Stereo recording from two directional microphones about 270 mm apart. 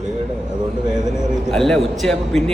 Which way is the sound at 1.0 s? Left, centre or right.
Centre.